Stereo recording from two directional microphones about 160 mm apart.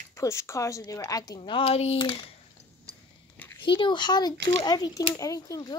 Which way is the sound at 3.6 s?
30° left (ahead or behind).